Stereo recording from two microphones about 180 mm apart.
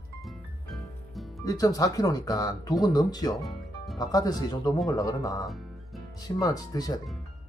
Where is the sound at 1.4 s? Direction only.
20° left (ahead or behind).